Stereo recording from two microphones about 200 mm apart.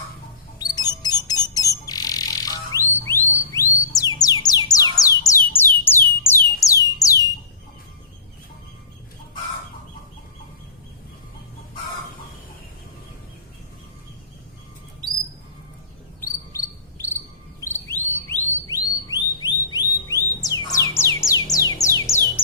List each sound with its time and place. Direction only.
0.6 s bird: 20° left (ahead or behind)
17.6 s a sound: 10° left (ahead or behind)
20.7 s music: 15° left (ahead or behind)